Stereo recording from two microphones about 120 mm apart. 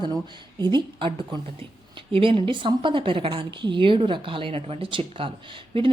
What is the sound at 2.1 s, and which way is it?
A woman's voice, 50° right (ahead or behind).